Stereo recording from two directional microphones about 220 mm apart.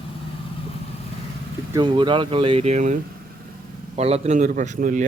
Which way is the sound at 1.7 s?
20° right (ahead or behind).